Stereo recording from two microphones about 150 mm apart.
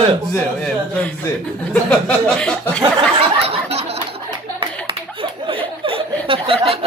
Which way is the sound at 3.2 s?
40° right (ahead or behind).